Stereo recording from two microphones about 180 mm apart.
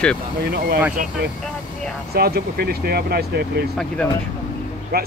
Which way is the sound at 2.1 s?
60° right (ahead or behind).